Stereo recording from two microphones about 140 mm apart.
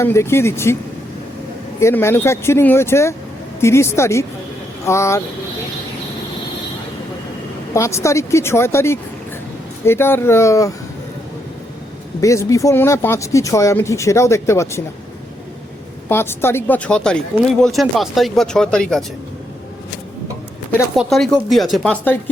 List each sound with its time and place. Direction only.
0.0 s speech: 20° left (ahead or behind)
1.8 s speech: 20° left (ahead or behind)
7.7 s speech: 20° left (ahead or behind)
12.2 s speech: 20° left (ahead or behind)
16.0 s speech: 15° left (ahead or behind)
20.9 s speech: centre (ahead or behind)